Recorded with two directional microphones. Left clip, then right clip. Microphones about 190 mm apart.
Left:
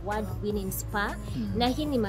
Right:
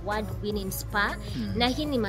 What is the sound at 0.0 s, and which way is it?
A woman's voice, 20° left (ahead or behind).